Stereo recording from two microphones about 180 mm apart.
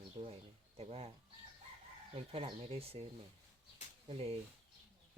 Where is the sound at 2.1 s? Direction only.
35° right (ahead or behind).